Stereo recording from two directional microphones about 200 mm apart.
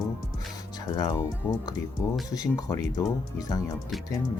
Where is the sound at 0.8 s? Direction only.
20° left (ahead or behind).